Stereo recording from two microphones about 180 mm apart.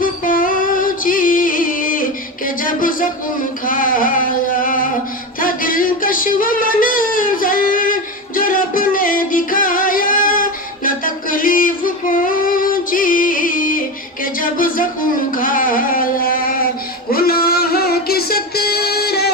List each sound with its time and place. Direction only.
0.0 s music: 50° left (ahead or behind)
3.7 s singing: 50° left (ahead or behind)
5.4 s a sound: 50° left (ahead or behind)
8.4 s music: 50° left (ahead or behind)
14.3 s a sound: 50° left (ahead or behind)
17.1 s music: 55° left (ahead or behind)